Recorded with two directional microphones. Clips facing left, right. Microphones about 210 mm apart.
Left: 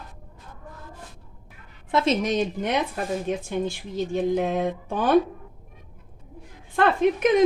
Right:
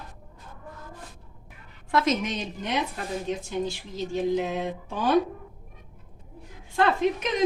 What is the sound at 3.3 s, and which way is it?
Speech, 55° left (ahead or behind).